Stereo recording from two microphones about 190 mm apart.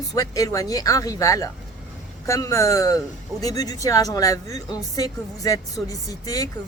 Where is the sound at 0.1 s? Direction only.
20° left (ahead or behind).